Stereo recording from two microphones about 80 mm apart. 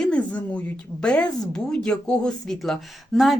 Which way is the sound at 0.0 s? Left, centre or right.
Centre.